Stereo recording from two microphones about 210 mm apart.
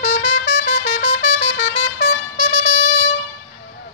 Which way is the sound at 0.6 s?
50° left (ahead or behind).